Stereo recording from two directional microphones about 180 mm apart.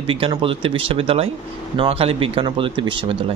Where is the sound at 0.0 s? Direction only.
30° right (ahead or behind).